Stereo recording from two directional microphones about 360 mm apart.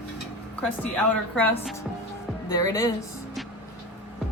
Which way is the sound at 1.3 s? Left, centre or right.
Centre.